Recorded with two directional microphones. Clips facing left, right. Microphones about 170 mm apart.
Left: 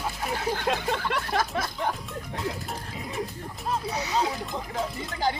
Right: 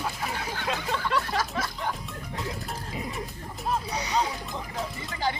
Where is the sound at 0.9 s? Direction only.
55° left (ahead or behind).